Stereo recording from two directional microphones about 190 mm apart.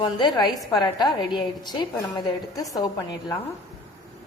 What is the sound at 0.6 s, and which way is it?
A woman's voice, 20° left (ahead or behind).